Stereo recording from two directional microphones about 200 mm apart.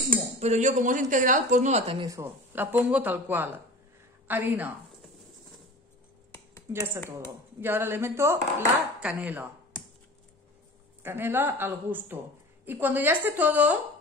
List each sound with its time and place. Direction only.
0.4 s speech: 35° right (ahead or behind)
2.0 s speech: 15° right (ahead or behind)
6.7 s speech: 15° right (ahead or behind)
11.0 s speech: 10° right (ahead or behind)